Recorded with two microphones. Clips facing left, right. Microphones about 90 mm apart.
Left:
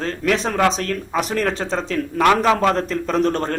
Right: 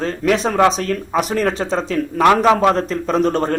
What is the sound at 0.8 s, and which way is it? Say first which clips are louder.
Speech: right 3 dB; 10° right (ahead or behind).